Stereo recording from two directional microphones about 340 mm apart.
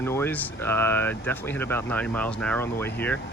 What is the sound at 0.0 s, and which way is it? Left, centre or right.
Speech, centre.